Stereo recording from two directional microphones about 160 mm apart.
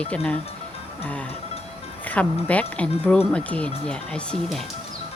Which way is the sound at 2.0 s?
10° left (ahead or behind).